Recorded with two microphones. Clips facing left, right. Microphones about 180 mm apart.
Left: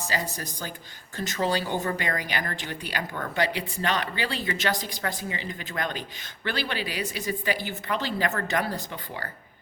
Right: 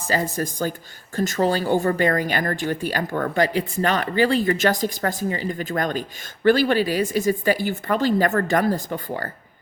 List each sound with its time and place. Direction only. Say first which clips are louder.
0.1 s speech: right 11 dB; 50° right (ahead or behind)